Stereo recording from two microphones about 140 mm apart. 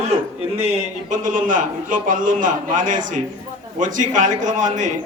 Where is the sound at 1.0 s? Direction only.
65° right (ahead or behind).